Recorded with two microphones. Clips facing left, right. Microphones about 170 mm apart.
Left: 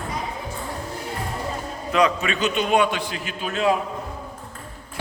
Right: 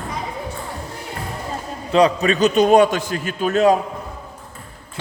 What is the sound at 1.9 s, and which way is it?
A man's voice, 35° right (ahead or behind).